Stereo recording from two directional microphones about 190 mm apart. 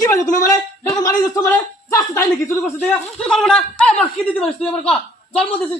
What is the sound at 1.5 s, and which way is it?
A man's voice, 15° left (ahead or behind).